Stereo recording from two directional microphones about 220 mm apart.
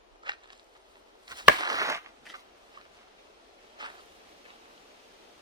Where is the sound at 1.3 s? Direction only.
20° right (ahead or behind).